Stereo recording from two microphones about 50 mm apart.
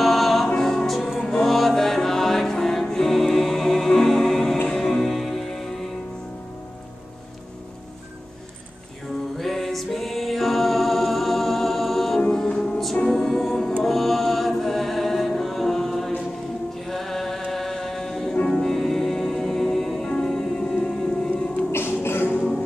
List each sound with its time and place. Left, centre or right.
0.0 s music: centre
9.4 s music: centre
12.2 s music: centre
13.1 s music: centre
16.8 s chant: centre
18.5 s music: centre
22.0 s music: left